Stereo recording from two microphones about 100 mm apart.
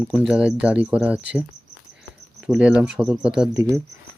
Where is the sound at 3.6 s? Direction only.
30° right (ahead or behind).